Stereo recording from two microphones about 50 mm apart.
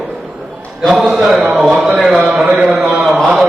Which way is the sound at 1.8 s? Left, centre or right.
Centre.